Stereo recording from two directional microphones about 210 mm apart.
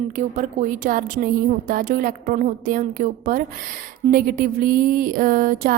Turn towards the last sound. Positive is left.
turn(degrees=-40)  # may be behind; listen again after turning